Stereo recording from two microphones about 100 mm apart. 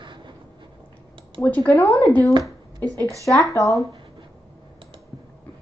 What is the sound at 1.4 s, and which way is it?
Speech, 15° left (ahead or behind).